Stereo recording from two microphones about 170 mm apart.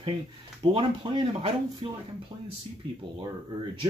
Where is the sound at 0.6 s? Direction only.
30° right (ahead or behind).